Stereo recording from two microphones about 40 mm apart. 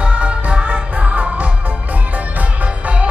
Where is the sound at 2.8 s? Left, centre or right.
Right.